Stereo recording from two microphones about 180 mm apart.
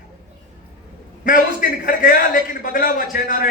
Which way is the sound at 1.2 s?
50° left (ahead or behind).